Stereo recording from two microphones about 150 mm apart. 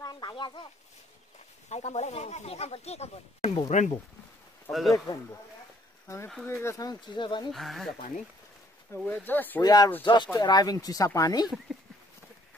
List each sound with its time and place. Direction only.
0.0 s a sound: 30° left (ahead or behind)
1.7 s speech: 45° left (ahead or behind)
4.6 s speech: centre (ahead or behind)
4.9 s speech: 20° left (ahead or behind)
6.4 s speech: 20° left (ahead or behind)
7.5 s speech: centre (ahead or behind)
8.9 s speech: 10° left (ahead or behind)
9.6 s speech: 25° left (ahead or behind)